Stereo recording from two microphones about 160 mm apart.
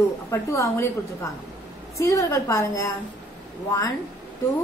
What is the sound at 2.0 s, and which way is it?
A woman's voice, 20° left (ahead or behind).